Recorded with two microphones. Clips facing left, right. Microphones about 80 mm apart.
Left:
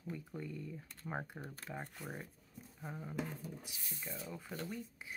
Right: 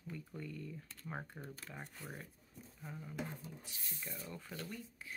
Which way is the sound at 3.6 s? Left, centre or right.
Centre.